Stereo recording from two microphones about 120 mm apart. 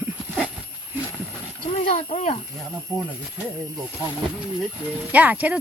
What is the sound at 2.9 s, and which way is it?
Speech, 5° left (ahead or behind).